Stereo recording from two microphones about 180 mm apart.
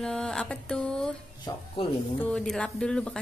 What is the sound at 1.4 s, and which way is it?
Speech, 30° left (ahead or behind).